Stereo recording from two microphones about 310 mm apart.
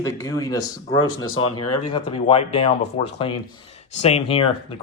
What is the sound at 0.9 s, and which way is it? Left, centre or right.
Speech, left.